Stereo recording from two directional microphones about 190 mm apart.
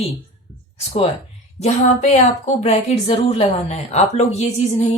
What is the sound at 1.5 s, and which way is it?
Speech, 35° left (ahead or behind).